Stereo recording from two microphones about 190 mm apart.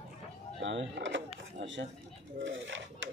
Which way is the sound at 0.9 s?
75° right (ahead or behind).